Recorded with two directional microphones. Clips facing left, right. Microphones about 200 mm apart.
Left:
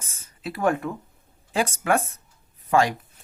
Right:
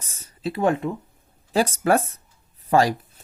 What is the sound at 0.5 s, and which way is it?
Speech, 20° right (ahead or behind).